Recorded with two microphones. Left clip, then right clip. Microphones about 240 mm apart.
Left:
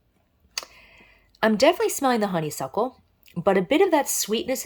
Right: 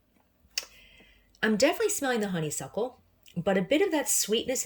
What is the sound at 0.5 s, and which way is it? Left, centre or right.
Speech, centre.